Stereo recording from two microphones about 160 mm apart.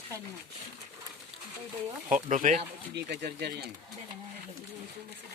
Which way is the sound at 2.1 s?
50° right (ahead or behind).